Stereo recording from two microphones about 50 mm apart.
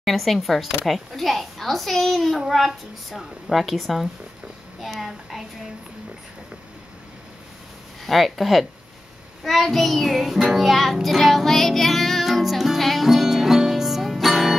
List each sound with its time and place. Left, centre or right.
0.0 s speech: centre
8.1 s speech: centre
9.4 s music: centre